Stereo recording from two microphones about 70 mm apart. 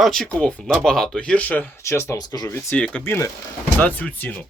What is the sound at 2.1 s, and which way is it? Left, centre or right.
Speech, left.